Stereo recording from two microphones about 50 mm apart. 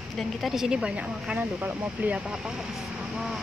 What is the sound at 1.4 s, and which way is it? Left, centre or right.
Speech, right.